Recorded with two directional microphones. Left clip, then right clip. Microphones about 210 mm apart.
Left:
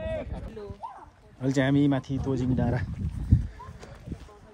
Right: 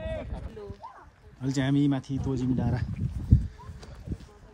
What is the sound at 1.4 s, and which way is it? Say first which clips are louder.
Speech: left 3 dB; 15° right (ahead or behind).